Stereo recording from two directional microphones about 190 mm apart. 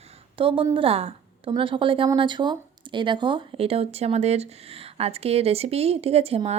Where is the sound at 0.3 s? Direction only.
25° right (ahead or behind).